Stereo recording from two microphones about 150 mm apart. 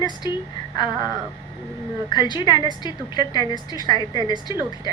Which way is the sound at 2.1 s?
30° left (ahead or behind).